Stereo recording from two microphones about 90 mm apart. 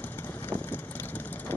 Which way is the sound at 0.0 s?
20° left (ahead or behind).